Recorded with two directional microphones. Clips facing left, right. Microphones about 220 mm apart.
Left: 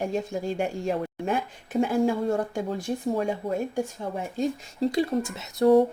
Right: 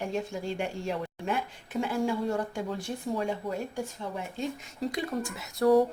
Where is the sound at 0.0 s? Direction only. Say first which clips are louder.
Left 4 dB; 45° left (ahead or behind).